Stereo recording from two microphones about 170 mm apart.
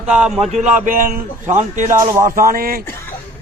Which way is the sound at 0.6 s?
50° right (ahead or behind).